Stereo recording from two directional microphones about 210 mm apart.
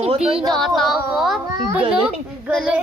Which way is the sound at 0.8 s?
Centre (ahead or behind).